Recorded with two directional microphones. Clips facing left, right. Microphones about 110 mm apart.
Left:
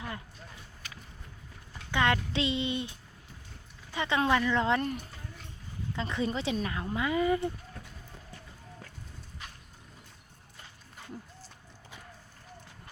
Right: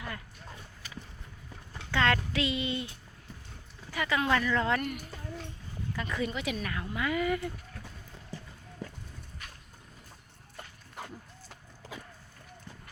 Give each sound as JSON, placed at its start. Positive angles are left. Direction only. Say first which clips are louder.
{"t": 1.9, "sound": "speech", "louder": "even", "side_deg": 15}
{"t": 3.9, "sound": "speech", "louder": "left 1 dB", "side_deg": 25}
{"t": 10.9, "sound": "a sound", "louder": "right 2 dB", "side_deg": -90}